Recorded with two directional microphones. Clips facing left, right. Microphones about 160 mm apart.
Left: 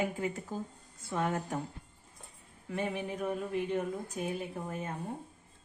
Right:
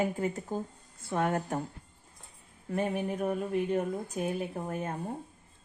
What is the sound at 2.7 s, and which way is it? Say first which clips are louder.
Speech: right 4 dB; 45° right (ahead or behind).